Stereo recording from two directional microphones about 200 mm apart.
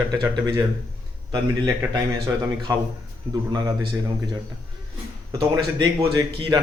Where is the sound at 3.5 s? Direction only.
20° right (ahead or behind).